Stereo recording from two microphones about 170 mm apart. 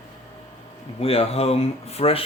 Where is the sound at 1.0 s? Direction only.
35° left (ahead or behind).